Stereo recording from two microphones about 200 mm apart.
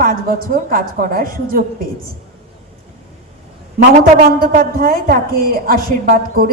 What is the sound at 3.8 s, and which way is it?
A woman's voice, 45° right (ahead or behind).